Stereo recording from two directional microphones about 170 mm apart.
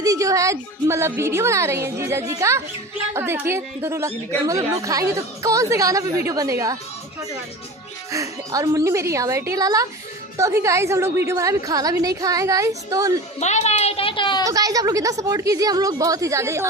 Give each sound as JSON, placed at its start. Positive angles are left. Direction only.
{"t": 0.0, "sound": "a woman's voice", "side_deg": -20}
{"t": 8.1, "sound": "a woman's voice", "side_deg": -20}
{"t": 13.4, "sound": "a woman's voice", "side_deg": 40}
{"t": 14.4, "sound": "a woman's voice", "side_deg": -20}